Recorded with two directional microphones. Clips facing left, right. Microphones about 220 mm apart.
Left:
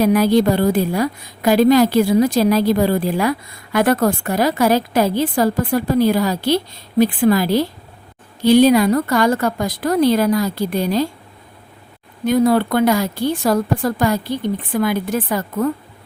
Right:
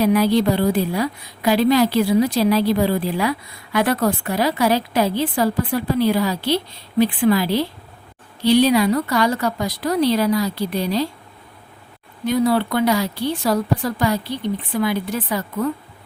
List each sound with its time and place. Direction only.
0.0 s a woman's voice: 45° left (ahead or behind)
12.2 s a woman's voice: 50° left (ahead or behind)